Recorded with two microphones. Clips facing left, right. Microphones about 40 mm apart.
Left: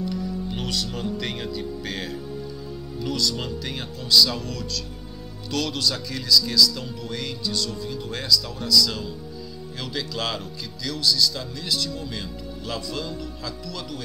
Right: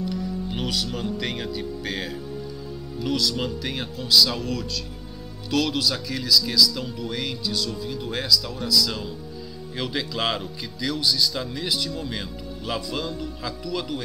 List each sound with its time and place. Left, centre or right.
0.0 s music: centre
0.5 s speech: centre